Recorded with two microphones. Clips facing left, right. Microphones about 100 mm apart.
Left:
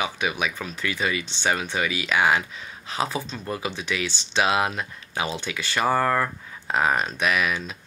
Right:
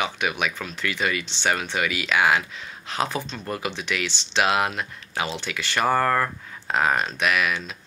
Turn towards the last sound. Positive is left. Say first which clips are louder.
# even
turn(degrees=20)  # may be behind; listen again after turning